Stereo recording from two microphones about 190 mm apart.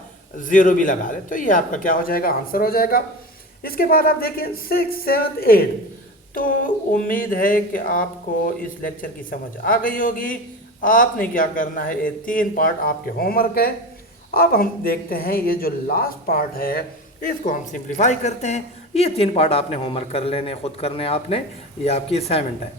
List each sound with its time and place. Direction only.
0.3 s speech: 45° left (ahead or behind)
9.6 s a man's voice: 45° left (ahead or behind); by 22.4 s 30° left (ahead or behind)